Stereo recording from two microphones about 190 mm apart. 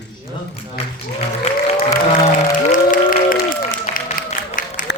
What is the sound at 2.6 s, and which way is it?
Applause, 45° left (ahead or behind).